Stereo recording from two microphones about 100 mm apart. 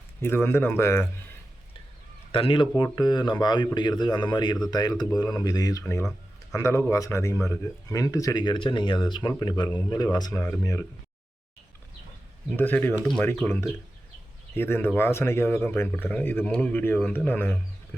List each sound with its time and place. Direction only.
0.2 s speech: 25° left (ahead or behind)
2.3 s speech: 60° left (ahead or behind); by 10.3 s 40° left (ahead or behind)
10.3 s speech: 30° left (ahead or behind)
12.5 s speech: 20° left (ahead or behind)